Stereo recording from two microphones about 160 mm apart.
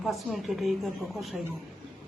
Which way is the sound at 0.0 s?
Centre (ahead or behind).